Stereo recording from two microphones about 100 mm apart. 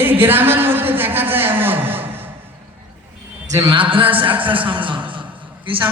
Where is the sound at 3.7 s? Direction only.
60° right (ahead or behind).